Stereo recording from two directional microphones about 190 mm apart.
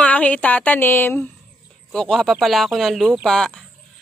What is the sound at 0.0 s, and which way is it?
A woman's voice, 5° left (ahead or behind).